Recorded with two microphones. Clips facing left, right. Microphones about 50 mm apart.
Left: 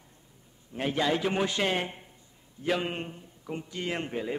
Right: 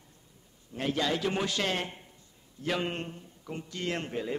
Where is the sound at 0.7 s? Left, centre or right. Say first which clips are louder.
Left 2 dB; centre.